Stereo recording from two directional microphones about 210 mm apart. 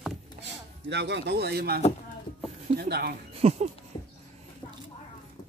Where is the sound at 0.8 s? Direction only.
55° right (ahead or behind).